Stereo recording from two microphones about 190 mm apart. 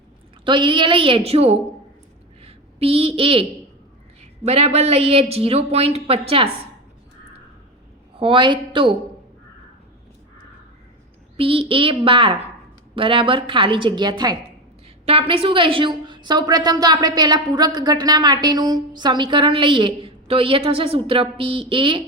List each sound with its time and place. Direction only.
0.4 s a woman's voice: 25° right (ahead or behind)
2.4 s a sound: 30° right (ahead or behind)
4.4 s speech: 35° right (ahead or behind)
8.2 s a woman's voice: 25° right (ahead or behind)
11.3 s a woman's voice: 30° right (ahead or behind)